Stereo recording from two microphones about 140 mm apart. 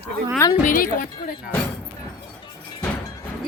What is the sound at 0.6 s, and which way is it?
Speech, 70° left (ahead or behind).